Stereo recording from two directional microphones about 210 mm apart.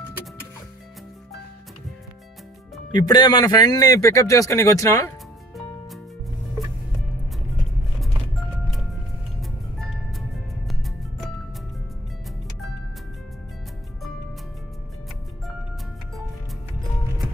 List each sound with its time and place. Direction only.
2.9 s speech: 20° left (ahead or behind)
8.0 s music: centre (ahead or behind)